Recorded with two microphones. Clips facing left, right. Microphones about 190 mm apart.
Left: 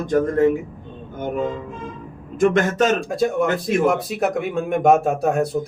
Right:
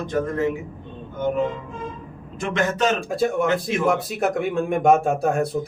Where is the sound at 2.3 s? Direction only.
50° left (ahead or behind).